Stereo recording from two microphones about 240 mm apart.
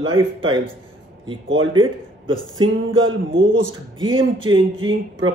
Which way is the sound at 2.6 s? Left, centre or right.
Right.